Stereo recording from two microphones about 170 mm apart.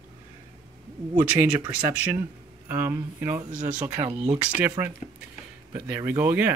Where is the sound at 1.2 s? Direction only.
10° right (ahead or behind).